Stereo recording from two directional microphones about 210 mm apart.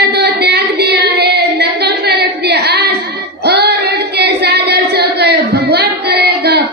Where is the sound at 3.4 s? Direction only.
50° right (ahead or behind).